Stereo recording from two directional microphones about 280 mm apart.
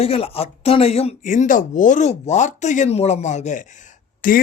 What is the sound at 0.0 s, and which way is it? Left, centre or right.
Speech, left.